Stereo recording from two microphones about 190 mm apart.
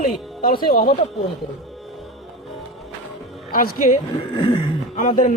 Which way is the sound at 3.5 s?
45° left (ahead or behind).